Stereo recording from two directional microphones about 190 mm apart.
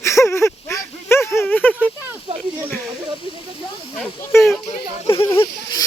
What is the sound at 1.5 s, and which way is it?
Speech, 10° left (ahead or behind).